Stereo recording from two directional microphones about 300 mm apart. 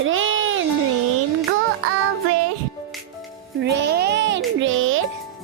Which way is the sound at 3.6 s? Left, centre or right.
Right.